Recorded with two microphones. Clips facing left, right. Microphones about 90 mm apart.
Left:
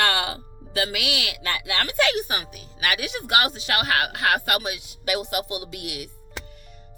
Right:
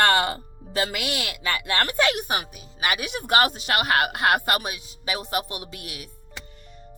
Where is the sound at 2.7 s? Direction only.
30° right (ahead or behind).